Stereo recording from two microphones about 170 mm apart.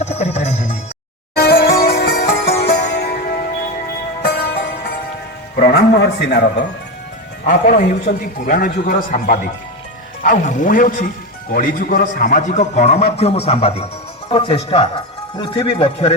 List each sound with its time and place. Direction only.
0.0 s music: 40° left (ahead or behind)
1.4 s music: 75° left (ahead or behind)
4.2 s music: 90° left
5.6 s a man's voice: 80° left
7.4 s a man's voice: 55° left (ahead or behind); by 16.1 s 35° left (ahead or behind)